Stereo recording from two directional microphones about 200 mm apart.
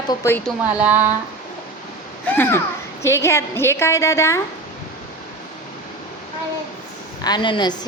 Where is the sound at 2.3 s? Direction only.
10° left (ahead or behind).